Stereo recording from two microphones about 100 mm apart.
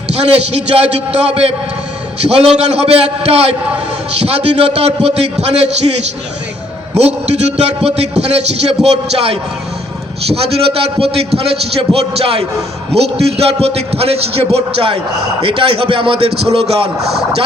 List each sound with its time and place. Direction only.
0.1 s a man's voice: 90° right
2.6 s a man's voice: 90° right
6.9 s a man's voice: 90° right
12.9 s a man's voice: 90° right